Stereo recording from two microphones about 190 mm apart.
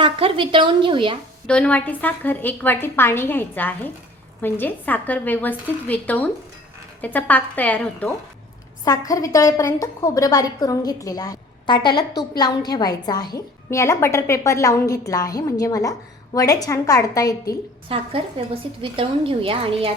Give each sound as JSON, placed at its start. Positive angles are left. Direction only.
{"t": 0.0, "sound": "a woman's voice", "side_deg": -30}
{"t": 1.5, "sound": "a woman's voice", "side_deg": 5}
{"t": 8.8, "sound": "a woman's voice", "side_deg": 20}
{"t": 17.8, "sound": "speech", "side_deg": -30}